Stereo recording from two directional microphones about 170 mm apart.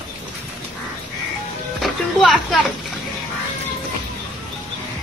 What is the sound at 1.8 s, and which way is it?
Music, centre (ahead or behind).